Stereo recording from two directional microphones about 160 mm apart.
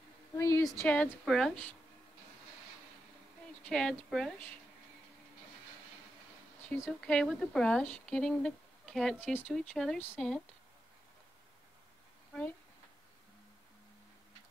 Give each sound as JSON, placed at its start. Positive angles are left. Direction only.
{"t": 0.4, "sound": "a sound", "side_deg": 20}
{"t": 0.7, "sound": "a woman's voice", "side_deg": 10}
{"t": 3.6, "sound": "speech", "side_deg": 5}
{"t": 6.7, "sound": "speech", "side_deg": 10}